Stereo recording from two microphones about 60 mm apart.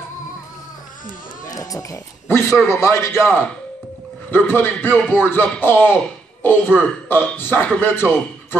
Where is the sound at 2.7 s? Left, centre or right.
Left.